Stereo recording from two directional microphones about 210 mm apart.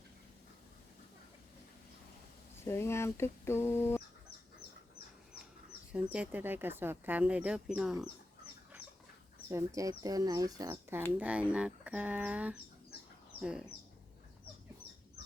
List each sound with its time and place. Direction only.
2.6 s speech: 10° left (ahead or behind)
5.9 s speech: 5° right (ahead or behind)
9.5 s speech: 15° right (ahead or behind)